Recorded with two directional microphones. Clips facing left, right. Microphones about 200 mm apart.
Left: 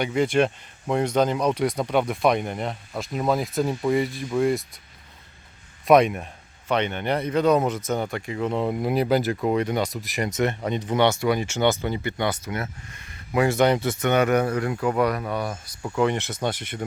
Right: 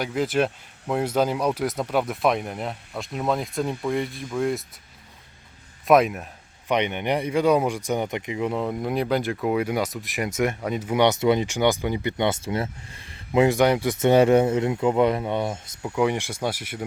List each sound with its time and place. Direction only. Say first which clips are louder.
0.0 s speech: left 2 dB; centre (ahead or behind)
5.8 s speech: left 1 dB; centre (ahead or behind)
6.7 s speech: right 1 dB; 15° right (ahead or behind)
8.5 s speech: left 5 dB; 5° left (ahead or behind); by 13.9 s 10° right (ahead or behind)
14.0 s speech: right 5 dB; 30° right (ahead or behind)
15.8 s speech: even; 10° right (ahead or behind)